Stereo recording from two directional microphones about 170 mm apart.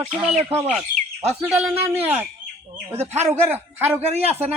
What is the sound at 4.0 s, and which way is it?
Speech, 40° right (ahead or behind).